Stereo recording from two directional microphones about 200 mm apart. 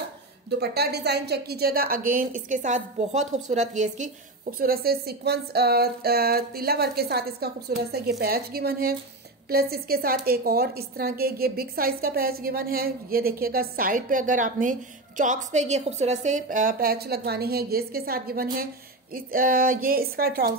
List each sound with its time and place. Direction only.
0.6 s a woman's voice: 55° right (ahead or behind)